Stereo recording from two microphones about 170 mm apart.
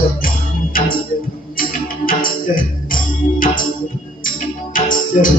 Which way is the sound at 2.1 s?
55° left (ahead or behind).